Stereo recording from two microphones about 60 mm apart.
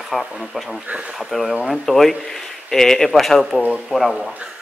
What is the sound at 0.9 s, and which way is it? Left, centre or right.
Speech, centre.